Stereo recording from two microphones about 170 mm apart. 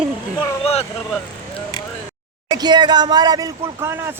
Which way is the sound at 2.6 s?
25° right (ahead or behind).